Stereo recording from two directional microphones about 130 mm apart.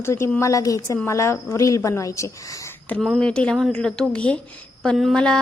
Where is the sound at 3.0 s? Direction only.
5° left (ahead or behind).